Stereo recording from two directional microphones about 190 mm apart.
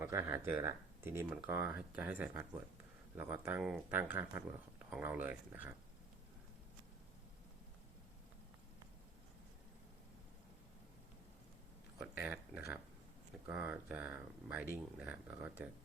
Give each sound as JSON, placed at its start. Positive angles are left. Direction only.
{"t": 0.0, "sound": "speech", "side_deg": -15}
{"t": 11.9, "sound": "speech", "side_deg": -5}